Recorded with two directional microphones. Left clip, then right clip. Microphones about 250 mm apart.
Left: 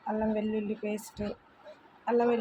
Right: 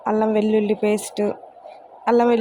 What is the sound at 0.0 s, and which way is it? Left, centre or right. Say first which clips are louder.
Speech: right 12 dB; right.